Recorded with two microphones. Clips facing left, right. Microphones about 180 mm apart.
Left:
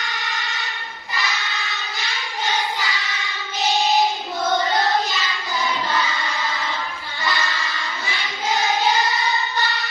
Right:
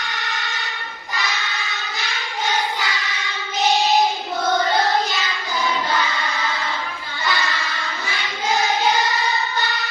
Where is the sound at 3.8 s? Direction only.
Centre (ahead or behind).